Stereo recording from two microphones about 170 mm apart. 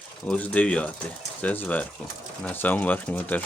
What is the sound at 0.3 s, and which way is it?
Speech, 10° left (ahead or behind).